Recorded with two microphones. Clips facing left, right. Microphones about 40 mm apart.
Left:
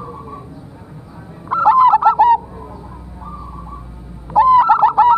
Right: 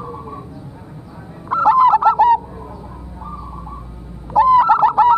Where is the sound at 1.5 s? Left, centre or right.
Centre.